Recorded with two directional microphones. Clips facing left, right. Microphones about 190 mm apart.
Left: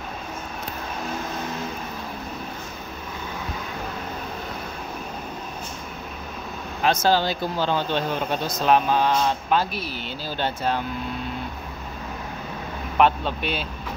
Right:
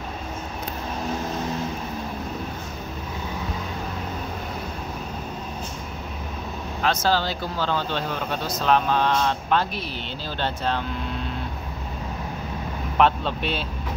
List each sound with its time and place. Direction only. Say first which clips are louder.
6.8 s speech: left 2 dB; 15° left (ahead or behind)
12.9 s speech: left 1 dB; 5° left (ahead or behind)